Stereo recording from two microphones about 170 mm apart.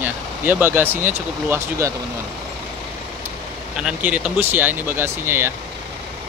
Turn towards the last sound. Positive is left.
turn(degrees=-15)  # may be behind; listen again after turning